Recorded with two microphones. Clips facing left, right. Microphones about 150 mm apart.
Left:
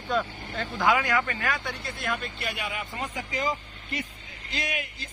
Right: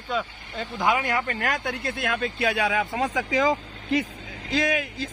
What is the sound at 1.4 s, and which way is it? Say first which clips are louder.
Speech: right 4 dB; 45° right (ahead or behind).